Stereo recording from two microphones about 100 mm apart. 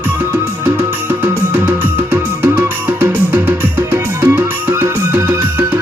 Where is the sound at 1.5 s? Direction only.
20° right (ahead or behind).